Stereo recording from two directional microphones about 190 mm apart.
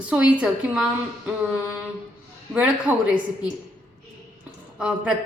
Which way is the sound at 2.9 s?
10° right (ahead or behind).